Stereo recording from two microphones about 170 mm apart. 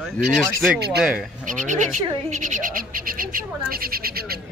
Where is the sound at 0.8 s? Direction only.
75° right (ahead or behind).